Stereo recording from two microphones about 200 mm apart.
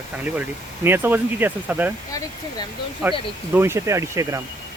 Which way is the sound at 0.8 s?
10° right (ahead or behind).